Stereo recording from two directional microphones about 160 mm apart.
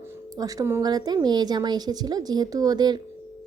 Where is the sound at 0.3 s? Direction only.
20° right (ahead or behind).